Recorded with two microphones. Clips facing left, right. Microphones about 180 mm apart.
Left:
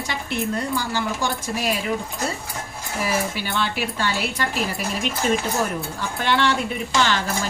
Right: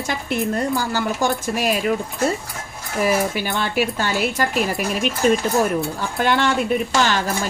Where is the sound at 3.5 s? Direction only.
45° right (ahead or behind).